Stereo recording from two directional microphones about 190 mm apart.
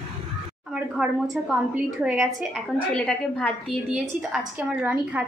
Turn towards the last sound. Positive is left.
turn(degrees=-5)  # may be behind; listen again after turning